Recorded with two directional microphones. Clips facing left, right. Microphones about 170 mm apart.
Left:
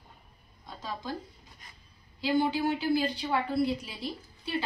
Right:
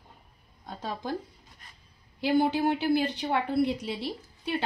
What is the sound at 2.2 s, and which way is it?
A woman's voice, 60° right (ahead or behind).